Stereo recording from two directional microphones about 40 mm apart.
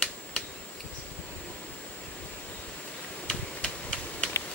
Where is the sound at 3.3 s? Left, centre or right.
Left.